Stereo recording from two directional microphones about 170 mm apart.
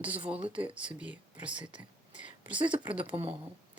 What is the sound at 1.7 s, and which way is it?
Speech, 45° left (ahead or behind).